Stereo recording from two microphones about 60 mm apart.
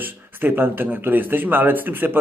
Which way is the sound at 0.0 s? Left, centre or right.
Right.